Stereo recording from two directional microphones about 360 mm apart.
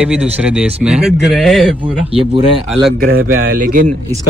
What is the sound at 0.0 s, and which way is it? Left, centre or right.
Speech, centre.